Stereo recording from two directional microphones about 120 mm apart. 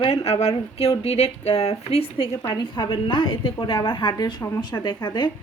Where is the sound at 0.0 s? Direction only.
55° left (ahead or behind); by 5.3 s 40° left (ahead or behind).